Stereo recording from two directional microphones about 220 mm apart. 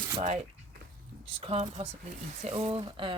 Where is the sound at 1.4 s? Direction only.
25° right (ahead or behind).